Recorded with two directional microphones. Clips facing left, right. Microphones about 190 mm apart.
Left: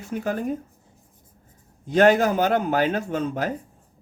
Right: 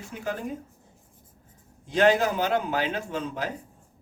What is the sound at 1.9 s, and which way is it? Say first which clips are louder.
A man's voice: left 4 dB; 50° left (ahead or behind).